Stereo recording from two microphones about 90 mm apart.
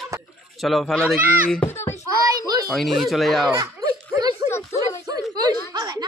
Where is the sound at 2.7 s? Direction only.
Centre (ahead or behind).